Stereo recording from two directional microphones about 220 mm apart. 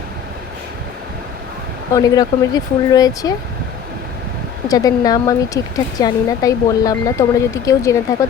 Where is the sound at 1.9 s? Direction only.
15° left (ahead or behind).